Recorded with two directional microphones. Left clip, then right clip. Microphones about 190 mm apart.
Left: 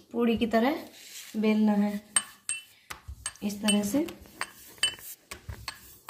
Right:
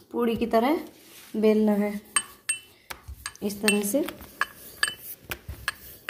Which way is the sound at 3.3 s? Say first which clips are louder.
Right 4 dB; 30° right (ahead or behind).